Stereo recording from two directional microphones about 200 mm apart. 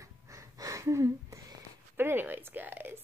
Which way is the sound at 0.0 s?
15° right (ahead or behind).